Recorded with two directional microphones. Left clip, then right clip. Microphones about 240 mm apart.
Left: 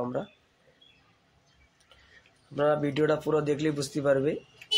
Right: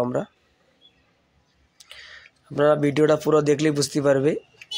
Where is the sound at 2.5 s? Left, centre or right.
Right.